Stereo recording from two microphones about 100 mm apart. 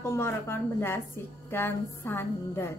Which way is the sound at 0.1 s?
25° left (ahead or behind).